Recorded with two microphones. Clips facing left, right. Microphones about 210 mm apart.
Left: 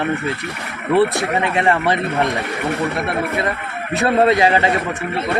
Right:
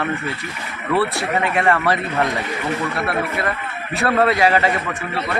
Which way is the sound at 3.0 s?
20° left (ahead or behind).